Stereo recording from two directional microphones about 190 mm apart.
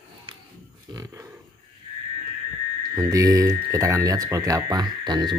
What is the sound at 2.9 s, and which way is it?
Speech, 15° right (ahead or behind).